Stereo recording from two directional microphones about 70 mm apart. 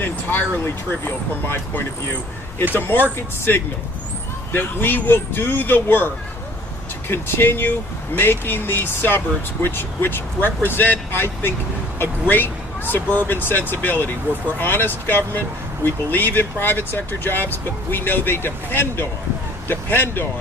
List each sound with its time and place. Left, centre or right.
0.0 s speech: left
4.5 s speech: left
7.1 s speech: left